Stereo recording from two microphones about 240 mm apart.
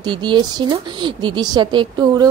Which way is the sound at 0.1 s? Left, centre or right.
Centre.